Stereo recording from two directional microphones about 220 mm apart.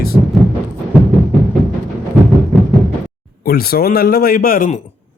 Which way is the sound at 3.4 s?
45° left (ahead or behind).